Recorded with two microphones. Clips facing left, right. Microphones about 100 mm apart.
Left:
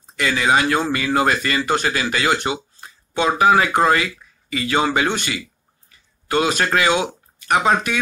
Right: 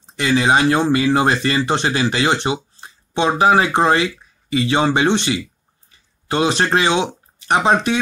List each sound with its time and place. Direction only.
0.0 s speech: 25° right (ahead or behind)